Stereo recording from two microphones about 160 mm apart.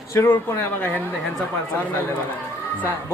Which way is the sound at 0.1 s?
15° left (ahead or behind).